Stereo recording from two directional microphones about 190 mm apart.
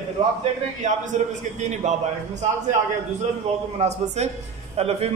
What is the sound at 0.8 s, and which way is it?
A man's voice, 40° right (ahead or behind).